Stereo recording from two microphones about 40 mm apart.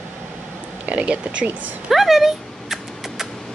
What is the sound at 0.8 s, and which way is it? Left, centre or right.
Speech, right.